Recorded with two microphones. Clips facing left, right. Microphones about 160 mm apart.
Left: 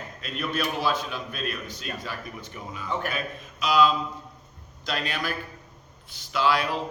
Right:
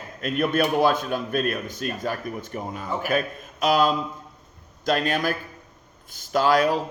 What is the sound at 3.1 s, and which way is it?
Speech, 50° right (ahead or behind).